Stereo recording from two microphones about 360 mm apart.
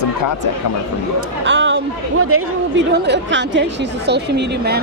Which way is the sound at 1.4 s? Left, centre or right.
Right.